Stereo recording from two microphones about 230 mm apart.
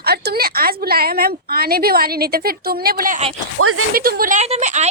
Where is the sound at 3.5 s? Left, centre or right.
Right.